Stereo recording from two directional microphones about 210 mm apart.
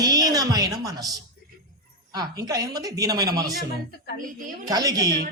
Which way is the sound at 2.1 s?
20° right (ahead or behind).